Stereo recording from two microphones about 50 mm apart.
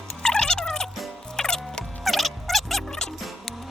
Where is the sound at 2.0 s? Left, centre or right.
Centre.